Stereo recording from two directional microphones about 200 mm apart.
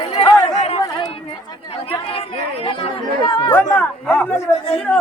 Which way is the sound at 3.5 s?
10° left (ahead or behind).